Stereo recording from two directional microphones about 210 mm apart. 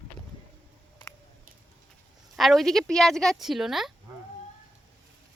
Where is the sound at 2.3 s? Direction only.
Centre (ahead or behind).